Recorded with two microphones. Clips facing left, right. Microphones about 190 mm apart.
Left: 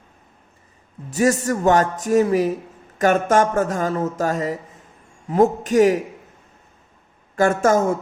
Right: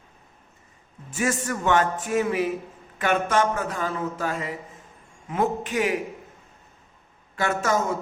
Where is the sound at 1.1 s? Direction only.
40° left (ahead or behind).